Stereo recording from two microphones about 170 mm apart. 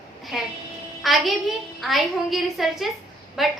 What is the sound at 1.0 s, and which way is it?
A child's voice, centre (ahead or behind).